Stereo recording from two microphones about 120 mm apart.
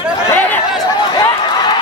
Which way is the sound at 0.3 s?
20° left (ahead or behind).